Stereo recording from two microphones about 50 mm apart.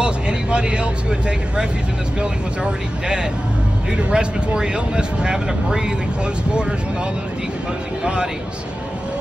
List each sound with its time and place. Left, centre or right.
0.0 s vehicle: centre
2.6 s speech: centre